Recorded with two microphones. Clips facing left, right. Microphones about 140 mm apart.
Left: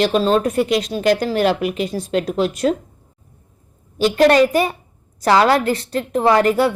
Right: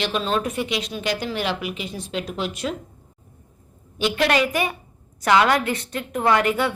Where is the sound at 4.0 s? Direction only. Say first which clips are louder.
Left 8 dB; 40° left (ahead or behind).